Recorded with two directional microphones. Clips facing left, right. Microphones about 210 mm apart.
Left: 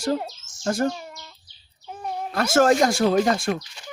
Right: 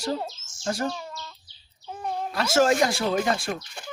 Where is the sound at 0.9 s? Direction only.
15° left (ahead or behind).